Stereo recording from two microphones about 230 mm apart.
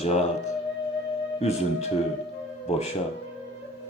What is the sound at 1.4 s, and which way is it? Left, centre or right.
Speech, left.